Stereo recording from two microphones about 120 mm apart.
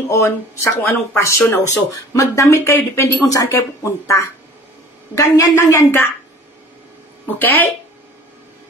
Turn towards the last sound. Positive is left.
turn(degrees=15)  # may be behind; listen again after turning